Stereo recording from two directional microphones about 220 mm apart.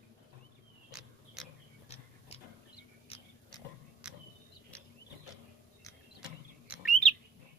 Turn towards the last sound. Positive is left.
turn(degrees=0)  # may be behind; listen again after turning